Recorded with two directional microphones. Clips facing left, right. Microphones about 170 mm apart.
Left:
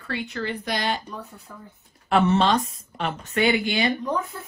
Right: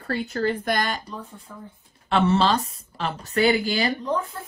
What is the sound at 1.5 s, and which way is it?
Speech, 5° right (ahead or behind).